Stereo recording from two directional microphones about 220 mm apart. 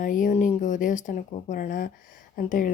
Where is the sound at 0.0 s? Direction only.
35° left (ahead or behind).